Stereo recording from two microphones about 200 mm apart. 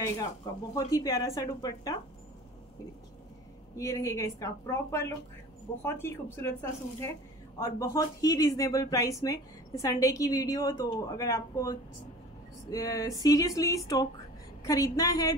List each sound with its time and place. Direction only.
0.7 s speech: 15° left (ahead or behind)
3.7 s speech: 15° left (ahead or behind)